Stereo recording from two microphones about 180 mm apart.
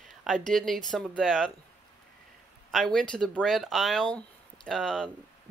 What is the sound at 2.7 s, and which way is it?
Speech, 5° left (ahead or behind).